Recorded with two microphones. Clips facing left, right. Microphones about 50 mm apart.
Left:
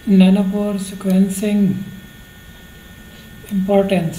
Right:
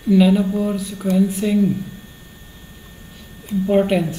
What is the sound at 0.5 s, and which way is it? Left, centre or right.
Speech, centre.